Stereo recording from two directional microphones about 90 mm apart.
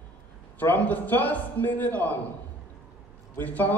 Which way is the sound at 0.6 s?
20° left (ahead or behind).